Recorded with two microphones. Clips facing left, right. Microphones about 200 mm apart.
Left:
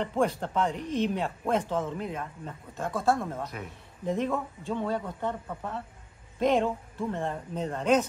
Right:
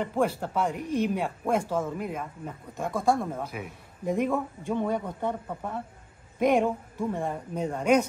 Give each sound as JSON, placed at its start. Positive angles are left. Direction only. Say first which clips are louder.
{"t": 0.0, "sound": "speech", "louder": "right 1 dB", "side_deg": -5}